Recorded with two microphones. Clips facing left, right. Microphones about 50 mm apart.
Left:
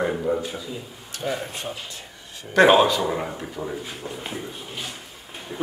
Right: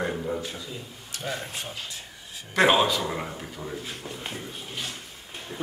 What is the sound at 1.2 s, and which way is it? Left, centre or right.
Speech, centre.